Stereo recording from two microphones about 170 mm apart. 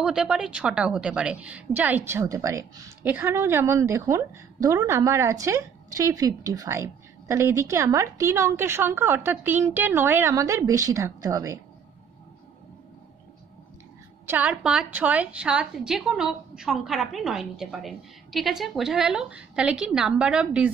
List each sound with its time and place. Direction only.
0.0 s a woman's voice: 5° right (ahead or behind); by 11.6 s 20° right (ahead or behind)
14.2 s a woman's voice: 10° right (ahead or behind)